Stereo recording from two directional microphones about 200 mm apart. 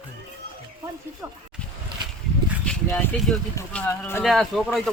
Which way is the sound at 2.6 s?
5° left (ahead or behind).